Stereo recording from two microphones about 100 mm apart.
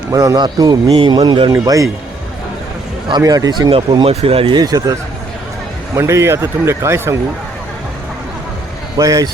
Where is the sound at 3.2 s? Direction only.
40° right (ahead or behind).